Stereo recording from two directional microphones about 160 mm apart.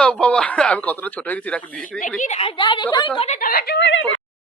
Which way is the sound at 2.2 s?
45° left (ahead or behind).